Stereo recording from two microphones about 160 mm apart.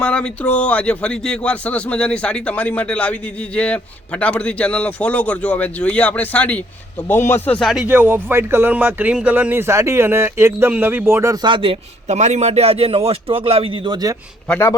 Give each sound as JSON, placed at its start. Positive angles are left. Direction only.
{"t": 0.0, "sound": "speech", "side_deg": 5}
{"t": 7.4, "sound": "speech", "side_deg": 5}
{"t": 11.4, "sound": "a man's voice", "side_deg": -30}
{"t": 14.4, "sound": "a man's voice", "side_deg": 10}